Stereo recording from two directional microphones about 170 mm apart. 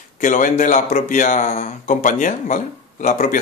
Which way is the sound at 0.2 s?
50° left (ahead or behind).